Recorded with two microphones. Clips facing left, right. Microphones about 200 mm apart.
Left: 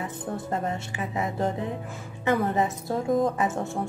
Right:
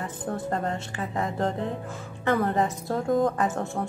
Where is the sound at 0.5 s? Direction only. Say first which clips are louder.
Even; 15° left (ahead or behind).